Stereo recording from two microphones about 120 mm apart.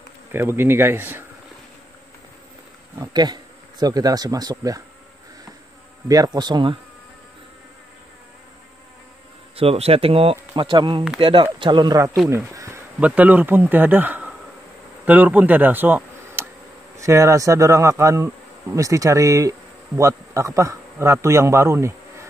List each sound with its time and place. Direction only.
0.3 s insect: 20° right (ahead or behind)
3.1 s speech: 35° right (ahead or behind)
6.0 s speech: 30° right (ahead or behind)
9.6 s speech: 55° right (ahead or behind)
10.5 s speech: 40° right (ahead or behind)
12.3 s a sound: 25° right (ahead or behind)
13.0 s speech: 15° right (ahead or behind)
16.9 s insect: 25° right (ahead or behind)
20.0 s a man's voice: 25° right (ahead or behind)